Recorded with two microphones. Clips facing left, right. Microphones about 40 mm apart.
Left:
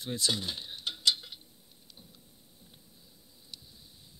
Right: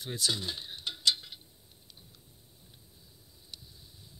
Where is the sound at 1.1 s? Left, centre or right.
Centre.